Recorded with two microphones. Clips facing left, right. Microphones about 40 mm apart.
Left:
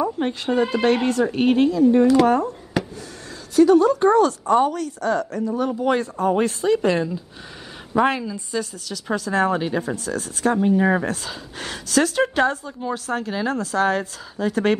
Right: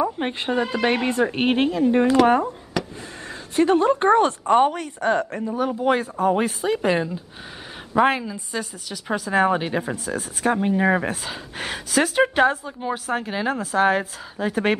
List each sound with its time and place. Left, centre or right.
0.2 s speech: right
0.6 s speech: centre
0.8 s a woman's voice: right
3.5 s a woman's voice: right
5.5 s speech: centre